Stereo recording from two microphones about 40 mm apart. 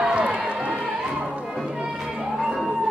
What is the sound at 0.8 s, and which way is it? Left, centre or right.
Music, right.